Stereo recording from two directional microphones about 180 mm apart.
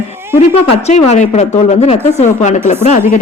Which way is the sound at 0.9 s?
40° left (ahead or behind).